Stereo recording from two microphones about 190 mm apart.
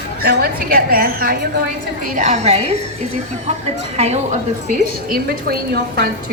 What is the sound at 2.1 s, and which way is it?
Speech, 35° right (ahead or behind).